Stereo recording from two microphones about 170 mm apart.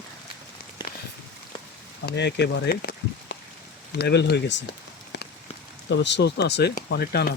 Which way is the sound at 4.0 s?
75° left (ahead or behind).